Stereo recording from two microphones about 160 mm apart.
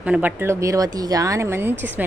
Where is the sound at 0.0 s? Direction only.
10° right (ahead or behind).